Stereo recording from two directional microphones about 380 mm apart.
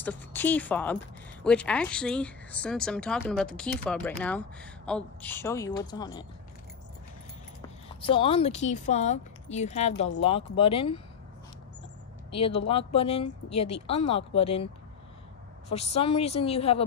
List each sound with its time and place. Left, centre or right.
0.0 s speech: centre
8.0 s speech: centre
12.3 s speech: centre
15.7 s speech: centre